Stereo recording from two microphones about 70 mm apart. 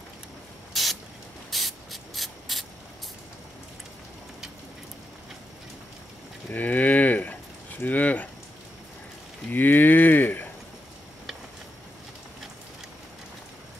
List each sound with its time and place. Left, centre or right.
0.7 s spray: centre
6.5 s a sound: left
9.5 s cattle: left